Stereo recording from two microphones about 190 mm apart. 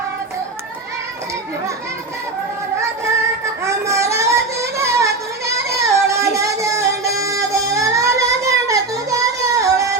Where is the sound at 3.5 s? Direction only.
15° right (ahead or behind).